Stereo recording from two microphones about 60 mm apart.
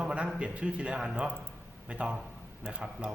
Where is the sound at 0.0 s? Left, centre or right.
Centre.